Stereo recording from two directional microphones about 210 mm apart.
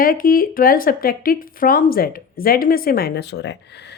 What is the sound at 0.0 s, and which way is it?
A woman's voice, 45° left (ahead or behind).